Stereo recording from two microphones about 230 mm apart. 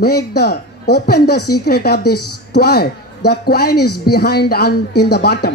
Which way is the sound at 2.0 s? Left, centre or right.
Left.